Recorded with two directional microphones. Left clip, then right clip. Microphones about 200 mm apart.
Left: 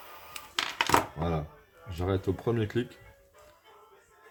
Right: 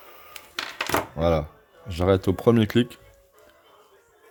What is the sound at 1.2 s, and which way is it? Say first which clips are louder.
Speech: right 11 dB; 50° right (ahead or behind).